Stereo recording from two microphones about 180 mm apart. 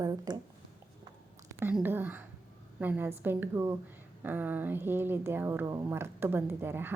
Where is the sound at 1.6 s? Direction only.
10° right (ahead or behind).